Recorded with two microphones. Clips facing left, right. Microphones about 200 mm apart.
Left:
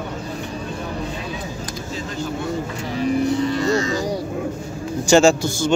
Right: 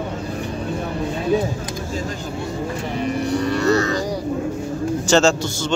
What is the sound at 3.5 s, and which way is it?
Music, 65° right (ahead or behind).